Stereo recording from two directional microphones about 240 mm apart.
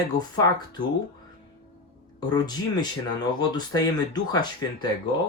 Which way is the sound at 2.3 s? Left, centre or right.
Centre.